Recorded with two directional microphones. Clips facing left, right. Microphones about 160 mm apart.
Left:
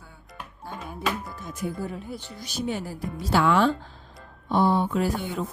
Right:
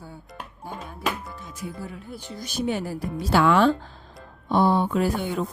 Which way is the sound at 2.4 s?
55° right (ahead or behind).